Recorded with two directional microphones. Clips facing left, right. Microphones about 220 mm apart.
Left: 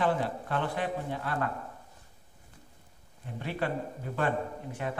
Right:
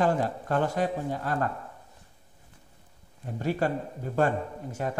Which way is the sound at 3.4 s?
40° right (ahead or behind).